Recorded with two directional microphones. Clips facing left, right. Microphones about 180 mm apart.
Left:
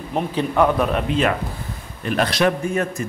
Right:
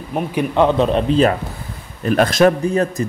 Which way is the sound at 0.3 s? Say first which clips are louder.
Right 3 dB; 20° right (ahead or behind).